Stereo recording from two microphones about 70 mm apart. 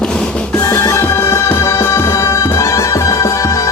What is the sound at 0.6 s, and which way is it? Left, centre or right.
Music, left.